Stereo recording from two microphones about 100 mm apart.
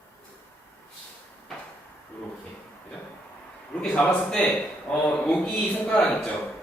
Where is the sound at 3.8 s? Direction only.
15° left (ahead or behind).